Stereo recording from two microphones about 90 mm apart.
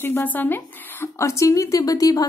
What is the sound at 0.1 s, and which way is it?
Speech, 20° left (ahead or behind).